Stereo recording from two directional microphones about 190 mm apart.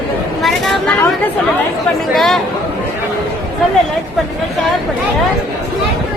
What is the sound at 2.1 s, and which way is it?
Speech, centre (ahead or behind).